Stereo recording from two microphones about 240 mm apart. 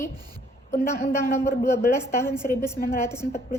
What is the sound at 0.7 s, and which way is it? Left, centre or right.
Speech, left.